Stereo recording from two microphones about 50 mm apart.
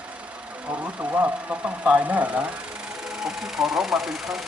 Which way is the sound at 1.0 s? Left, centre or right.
Right.